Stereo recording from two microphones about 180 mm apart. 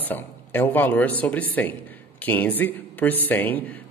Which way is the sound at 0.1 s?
10° left (ahead or behind).